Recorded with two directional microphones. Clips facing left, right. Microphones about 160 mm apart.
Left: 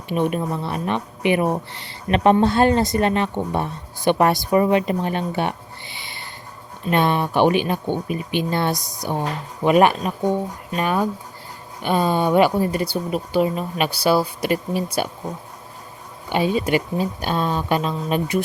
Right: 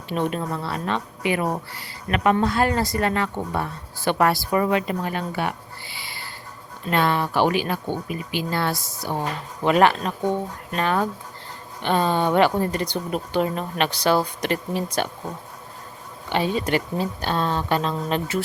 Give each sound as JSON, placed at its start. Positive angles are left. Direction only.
{"t": 0.1, "sound": "a woman's voice", "side_deg": 15}
{"t": 16.3, "sound": "speech", "side_deg": 15}